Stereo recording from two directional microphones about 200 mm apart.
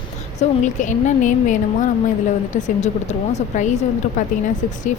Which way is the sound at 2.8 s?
35° left (ahead or behind).